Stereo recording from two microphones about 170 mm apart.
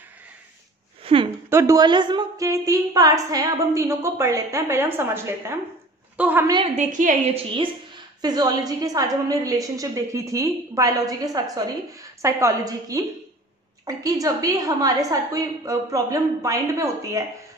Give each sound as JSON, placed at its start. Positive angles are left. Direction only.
{"t": 1.0, "sound": "a sound", "side_deg": -30}
{"t": 1.5, "sound": "a woman's voice", "side_deg": -15}
{"t": 6.8, "sound": "a woman's voice", "side_deg": -50}
{"t": 8.2, "sound": "a woman's voice", "side_deg": -25}